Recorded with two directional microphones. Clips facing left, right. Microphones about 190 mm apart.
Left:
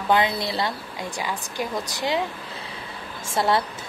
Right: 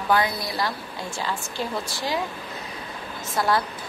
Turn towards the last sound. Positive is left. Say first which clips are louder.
# left 1 dB
turn(degrees=25)  # may be behind; listen again after turning